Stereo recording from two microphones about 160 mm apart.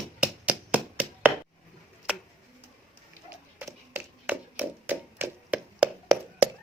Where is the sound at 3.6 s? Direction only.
10° right (ahead or behind).